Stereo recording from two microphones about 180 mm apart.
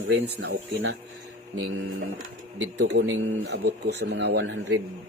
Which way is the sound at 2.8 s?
80° right.